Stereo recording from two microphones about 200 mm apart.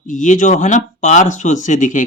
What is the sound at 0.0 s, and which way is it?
Speech, 40° left (ahead or behind).